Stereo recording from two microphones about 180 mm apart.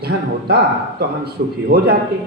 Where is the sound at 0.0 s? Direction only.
60° right (ahead or behind).